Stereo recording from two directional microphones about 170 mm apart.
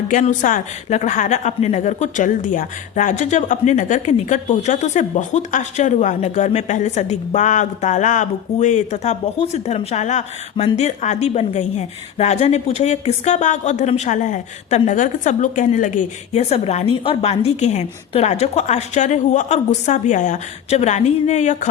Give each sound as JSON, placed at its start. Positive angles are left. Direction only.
{"t": 0.1, "sound": "a woman's voice", "side_deg": 50}